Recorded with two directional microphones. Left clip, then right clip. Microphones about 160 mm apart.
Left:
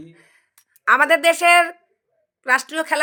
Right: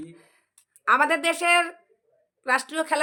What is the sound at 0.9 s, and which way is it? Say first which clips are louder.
A woman's voice: left 6 dB; 15° left (ahead or behind).